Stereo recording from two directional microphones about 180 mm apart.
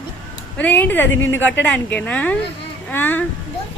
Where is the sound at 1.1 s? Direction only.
90° left.